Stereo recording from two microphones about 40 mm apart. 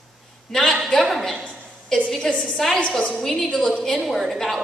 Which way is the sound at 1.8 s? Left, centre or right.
Centre.